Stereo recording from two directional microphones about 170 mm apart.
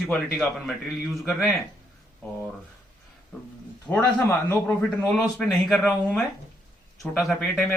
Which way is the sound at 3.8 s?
10° left (ahead or behind).